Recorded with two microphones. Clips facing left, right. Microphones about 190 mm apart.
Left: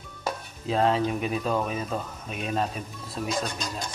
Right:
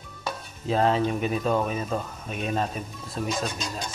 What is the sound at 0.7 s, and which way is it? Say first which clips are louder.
Speech: right 1 dB; centre (ahead or behind).